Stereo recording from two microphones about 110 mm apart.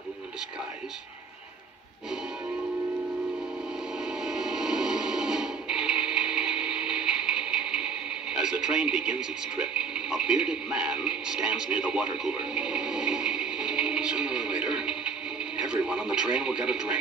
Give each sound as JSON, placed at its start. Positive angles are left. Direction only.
{"t": 4.0, "sound": "music", "side_deg": -5}
{"t": 8.3, "sound": "speech", "side_deg": -5}